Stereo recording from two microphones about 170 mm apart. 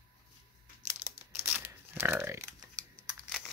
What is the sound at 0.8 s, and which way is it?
Crumpling, 15° right (ahead or behind).